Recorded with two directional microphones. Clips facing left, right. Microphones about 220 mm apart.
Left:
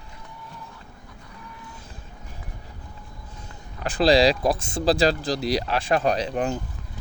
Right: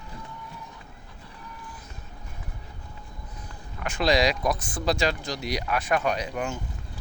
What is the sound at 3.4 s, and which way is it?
Speech, 35° left (ahead or behind).